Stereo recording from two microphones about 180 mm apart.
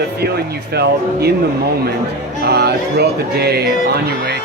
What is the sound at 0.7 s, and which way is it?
Music, 65° right (ahead or behind).